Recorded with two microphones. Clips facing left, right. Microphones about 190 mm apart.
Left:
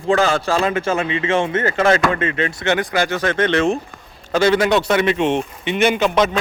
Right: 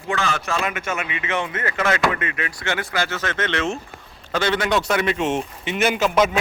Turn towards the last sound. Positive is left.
turn(degrees=-5)  # may be behind; listen again after turning